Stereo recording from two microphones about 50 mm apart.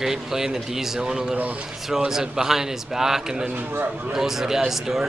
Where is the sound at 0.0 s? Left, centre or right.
Centre.